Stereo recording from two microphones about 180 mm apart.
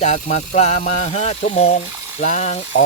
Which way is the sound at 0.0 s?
40° left (ahead or behind).